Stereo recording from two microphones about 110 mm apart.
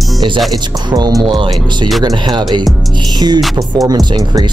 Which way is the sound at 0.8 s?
40° right (ahead or behind).